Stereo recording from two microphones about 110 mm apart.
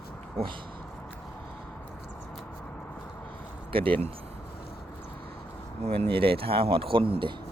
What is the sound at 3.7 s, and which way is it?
Speech, 55° right (ahead or behind).